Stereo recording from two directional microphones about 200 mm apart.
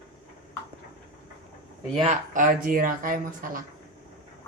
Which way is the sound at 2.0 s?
40° right (ahead or behind).